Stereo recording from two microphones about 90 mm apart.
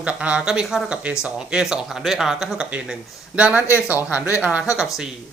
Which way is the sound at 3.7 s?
30° left (ahead or behind).